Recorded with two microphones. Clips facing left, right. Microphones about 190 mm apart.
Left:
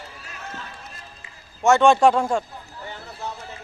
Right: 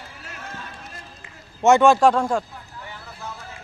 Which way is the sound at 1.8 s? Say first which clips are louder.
Even; centre (ahead or behind).